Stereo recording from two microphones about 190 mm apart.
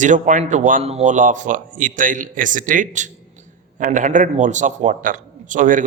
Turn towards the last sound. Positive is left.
turn(degrees=-45)  # may be behind; listen again after turning